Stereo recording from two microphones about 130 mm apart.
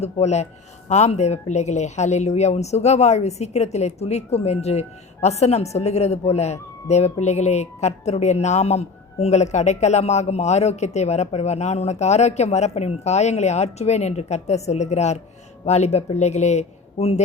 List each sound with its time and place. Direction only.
0.0 s speech: 55° left (ahead or behind)